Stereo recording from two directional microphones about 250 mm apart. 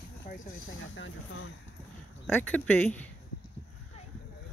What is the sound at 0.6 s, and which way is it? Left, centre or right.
Speech, left.